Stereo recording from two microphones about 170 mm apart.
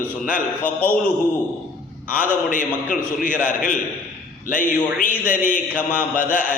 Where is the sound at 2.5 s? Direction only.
50° left (ahead or behind).